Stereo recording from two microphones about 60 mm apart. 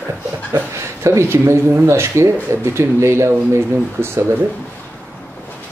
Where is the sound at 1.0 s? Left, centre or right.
Right.